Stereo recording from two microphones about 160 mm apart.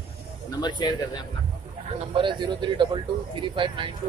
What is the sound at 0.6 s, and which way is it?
Speech, 30° left (ahead or behind).